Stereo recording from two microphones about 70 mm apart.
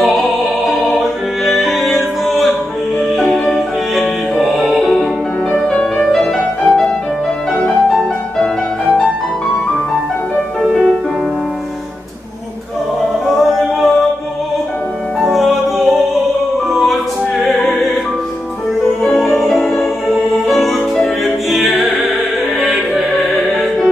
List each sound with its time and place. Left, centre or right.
0.0 s music: centre
5.5 s music: centre
13.4 s music: centre
15.1 s music: centre
17.5 s opera: centre
19.0 s music: centre